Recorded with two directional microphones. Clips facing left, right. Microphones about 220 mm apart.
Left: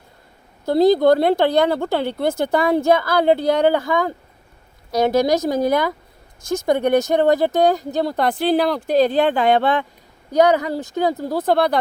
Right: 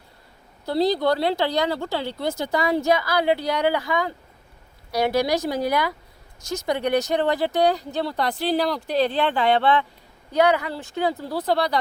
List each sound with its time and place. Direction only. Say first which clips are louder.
0.6 s speech: left 7 dB; 45° left (ahead or behind)